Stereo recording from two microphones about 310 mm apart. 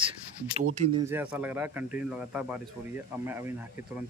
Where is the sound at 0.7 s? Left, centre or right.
Right.